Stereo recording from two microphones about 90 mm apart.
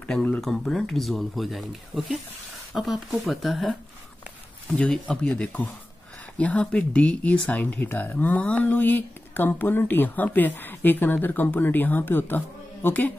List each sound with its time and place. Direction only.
0.0 s a sound: 15° left (ahead or behind)
0.4 s speech: 5° left (ahead or behind)
4.7 s speech: 10° left (ahead or behind)